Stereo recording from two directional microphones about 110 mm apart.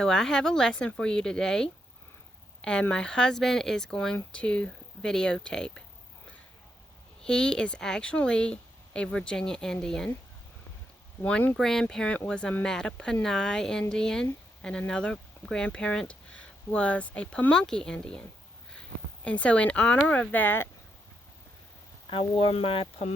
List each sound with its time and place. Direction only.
0.0 s speech: 5° left (ahead or behind)
7.3 s speech: 5° left (ahead or behind)
11.2 s speech: 15° left (ahead or behind)
22.1 s speech: 55° left (ahead or behind)